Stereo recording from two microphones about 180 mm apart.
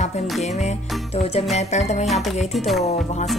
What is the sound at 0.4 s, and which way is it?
Music, 40° left (ahead or behind).